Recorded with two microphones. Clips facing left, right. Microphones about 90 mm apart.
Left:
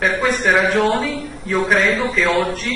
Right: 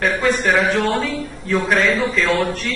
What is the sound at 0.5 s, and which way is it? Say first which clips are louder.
A man's voice: left 4 dB; 20° left (ahead or behind).